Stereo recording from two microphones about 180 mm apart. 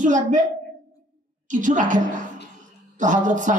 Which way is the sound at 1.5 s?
45° right (ahead or behind).